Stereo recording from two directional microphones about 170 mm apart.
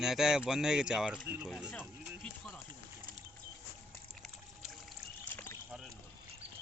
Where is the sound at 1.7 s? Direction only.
5° left (ahead or behind).